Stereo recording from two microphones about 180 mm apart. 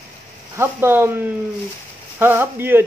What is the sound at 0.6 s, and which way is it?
Speech, 15° right (ahead or behind).